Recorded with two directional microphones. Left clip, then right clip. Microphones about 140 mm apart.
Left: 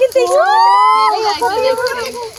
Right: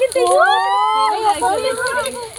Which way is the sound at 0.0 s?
55° left (ahead or behind).